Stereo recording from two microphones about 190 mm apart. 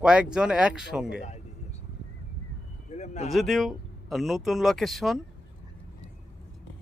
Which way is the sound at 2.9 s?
40° left (ahead or behind).